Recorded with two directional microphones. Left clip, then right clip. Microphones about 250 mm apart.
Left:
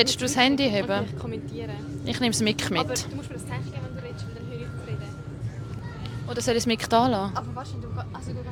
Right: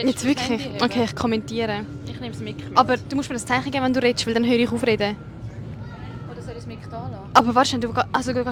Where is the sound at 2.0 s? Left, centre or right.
Left.